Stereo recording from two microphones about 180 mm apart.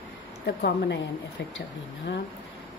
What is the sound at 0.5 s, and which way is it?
Speech, 65° left (ahead or behind).